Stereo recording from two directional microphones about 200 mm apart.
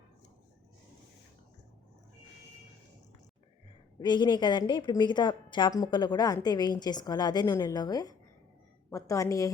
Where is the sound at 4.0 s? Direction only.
20° left (ahead or behind).